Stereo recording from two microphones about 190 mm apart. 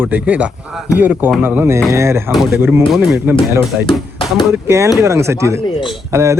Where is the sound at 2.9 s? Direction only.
Centre (ahead or behind).